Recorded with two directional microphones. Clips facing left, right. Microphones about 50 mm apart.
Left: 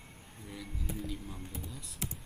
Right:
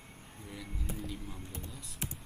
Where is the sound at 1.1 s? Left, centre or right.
Centre.